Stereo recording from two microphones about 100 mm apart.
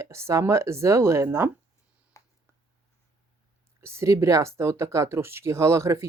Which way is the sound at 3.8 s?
30° right (ahead or behind).